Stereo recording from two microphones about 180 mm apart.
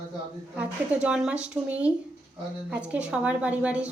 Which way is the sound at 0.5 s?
5° right (ahead or behind).